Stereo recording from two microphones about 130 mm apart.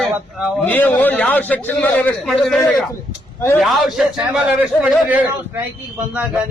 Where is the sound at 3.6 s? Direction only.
Centre (ahead or behind).